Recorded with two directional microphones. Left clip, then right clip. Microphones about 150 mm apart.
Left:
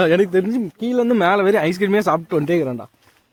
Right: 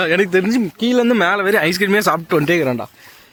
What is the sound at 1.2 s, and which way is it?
Speech, centre (ahead or behind).